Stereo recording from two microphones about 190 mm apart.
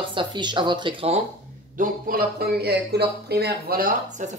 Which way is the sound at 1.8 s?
50° right (ahead or behind).